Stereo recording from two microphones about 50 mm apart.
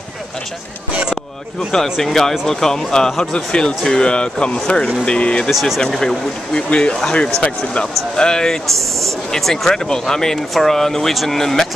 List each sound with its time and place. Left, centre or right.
1.7 s speech: centre; by 5.5 s left
5.5 s speech: centre
5.8 s speech: centre
8.6 s speech: centre